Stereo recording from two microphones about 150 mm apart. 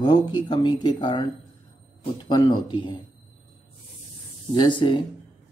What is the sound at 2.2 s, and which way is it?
Speech, 30° left (ahead or behind).